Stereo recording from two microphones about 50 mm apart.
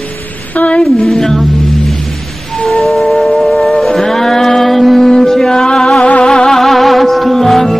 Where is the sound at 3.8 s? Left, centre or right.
Centre.